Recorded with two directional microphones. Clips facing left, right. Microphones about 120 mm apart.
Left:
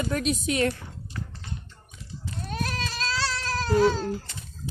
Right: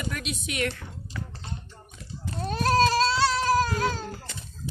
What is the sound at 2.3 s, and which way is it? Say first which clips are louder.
Goat: right 8 dB; 35° right (ahead or behind).